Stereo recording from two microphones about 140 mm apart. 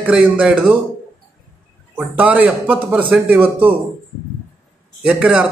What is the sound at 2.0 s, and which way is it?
A man's voice, 10° right (ahead or behind).